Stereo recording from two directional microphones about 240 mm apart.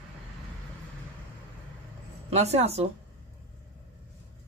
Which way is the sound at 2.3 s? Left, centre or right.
Right.